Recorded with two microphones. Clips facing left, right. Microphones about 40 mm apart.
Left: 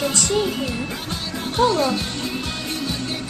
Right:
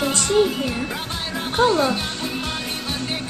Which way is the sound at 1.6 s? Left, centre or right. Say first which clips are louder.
Even; right.